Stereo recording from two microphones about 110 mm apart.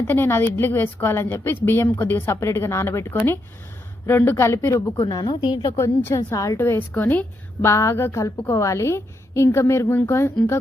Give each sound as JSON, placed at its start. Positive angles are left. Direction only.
{"t": 0.1, "sound": "a woman's voice", "side_deg": 20}
{"t": 5.7, "sound": "a woman's voice", "side_deg": 25}